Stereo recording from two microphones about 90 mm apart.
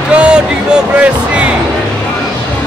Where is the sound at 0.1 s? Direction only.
15° right (ahead or behind).